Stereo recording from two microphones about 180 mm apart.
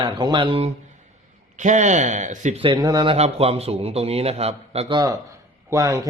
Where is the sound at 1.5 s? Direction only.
40° right (ahead or behind).